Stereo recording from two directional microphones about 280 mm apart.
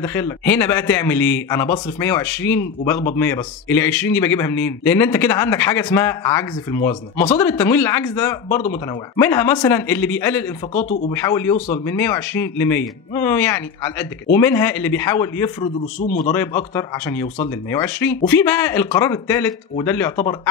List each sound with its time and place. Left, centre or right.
0.0 s a man's voice: centre
10.7 s speech: left
11.1 s a man's voice: centre
11.5 s speech: left
11.8 s a man's voice: centre